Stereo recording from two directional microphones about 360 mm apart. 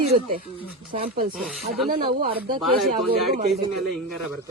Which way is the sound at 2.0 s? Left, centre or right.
Right.